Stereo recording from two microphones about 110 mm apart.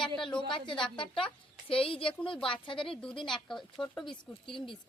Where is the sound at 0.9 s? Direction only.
55° left (ahead or behind).